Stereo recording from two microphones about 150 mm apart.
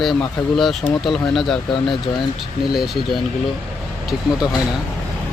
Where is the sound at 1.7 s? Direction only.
35° left (ahead or behind).